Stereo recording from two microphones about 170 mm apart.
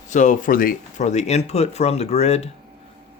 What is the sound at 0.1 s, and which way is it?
Speech, 50° left (ahead or behind).